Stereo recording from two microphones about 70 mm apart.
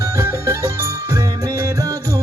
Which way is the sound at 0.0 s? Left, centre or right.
Right.